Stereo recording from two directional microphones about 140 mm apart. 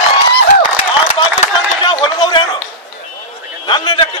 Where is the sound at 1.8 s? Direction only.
35° left (ahead or behind).